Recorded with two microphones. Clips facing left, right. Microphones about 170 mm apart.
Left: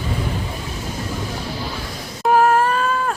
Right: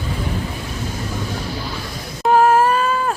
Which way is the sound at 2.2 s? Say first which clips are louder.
Right 2 dB; centre (ahead or behind).